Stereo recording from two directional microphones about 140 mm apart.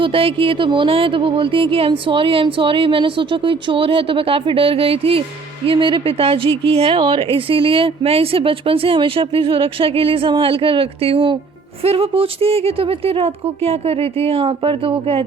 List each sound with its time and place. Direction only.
0.0 s a woman's voice: 40° right (ahead or behind)